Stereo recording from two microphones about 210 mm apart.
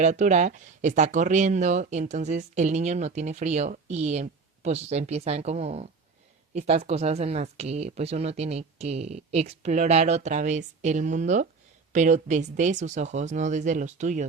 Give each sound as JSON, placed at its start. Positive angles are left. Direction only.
{"t": 0.0, "sound": "speech", "side_deg": -35}